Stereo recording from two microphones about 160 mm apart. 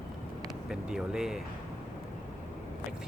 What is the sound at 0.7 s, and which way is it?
Speech, 5° right (ahead or behind).